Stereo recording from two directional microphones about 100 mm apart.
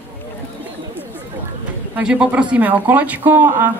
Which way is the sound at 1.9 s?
10° right (ahead or behind).